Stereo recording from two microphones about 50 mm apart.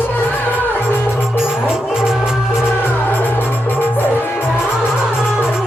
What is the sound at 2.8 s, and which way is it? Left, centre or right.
Music, left.